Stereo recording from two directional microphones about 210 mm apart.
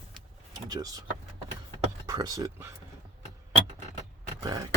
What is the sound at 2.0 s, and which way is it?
Speech, 15° right (ahead or behind).